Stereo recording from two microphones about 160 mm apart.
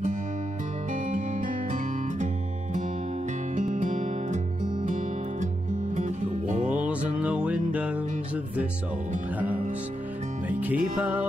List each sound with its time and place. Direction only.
3.5 s music: 55° right (ahead or behind)
5.9 s music: 50° right (ahead or behind)
6.8 s music: 10° right (ahead or behind)
10.5 s music: 10° right (ahead or behind)